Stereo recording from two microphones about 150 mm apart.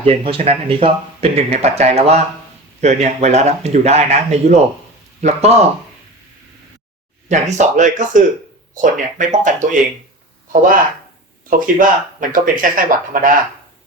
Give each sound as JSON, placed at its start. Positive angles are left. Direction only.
{"t": 0.0, "sound": "speech", "side_deg": -40}
{"t": 7.3, "sound": "speech", "side_deg": -50}